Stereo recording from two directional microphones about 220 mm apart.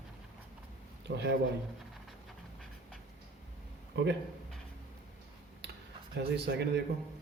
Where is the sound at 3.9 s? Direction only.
50° right (ahead or behind).